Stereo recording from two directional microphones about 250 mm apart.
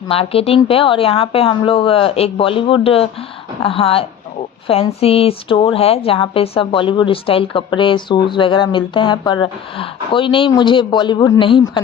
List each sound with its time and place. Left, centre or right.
0.1 s a woman's voice: left